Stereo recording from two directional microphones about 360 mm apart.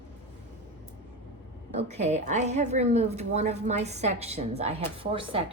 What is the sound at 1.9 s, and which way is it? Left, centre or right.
A woman's voice, centre.